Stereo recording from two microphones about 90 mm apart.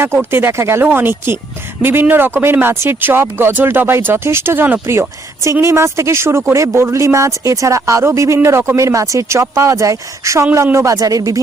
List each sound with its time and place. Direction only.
0.0 s a man's voice: 25° right (ahead or behind)